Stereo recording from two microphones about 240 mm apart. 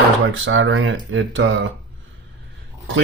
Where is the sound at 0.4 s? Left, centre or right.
Right.